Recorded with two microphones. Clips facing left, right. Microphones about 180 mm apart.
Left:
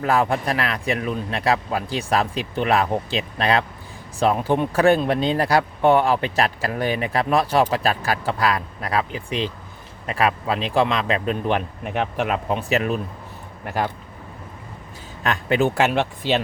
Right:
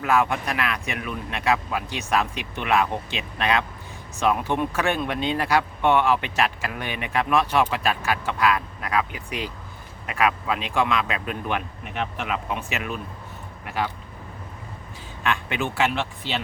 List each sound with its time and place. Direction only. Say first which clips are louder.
0.0 s speech: left 2 dB; 35° left (ahead or behind)
11.9 s speech: left 5 dB; 50° left (ahead or behind)
15.2 s speech: left 6 dB; 35° left (ahead or behind)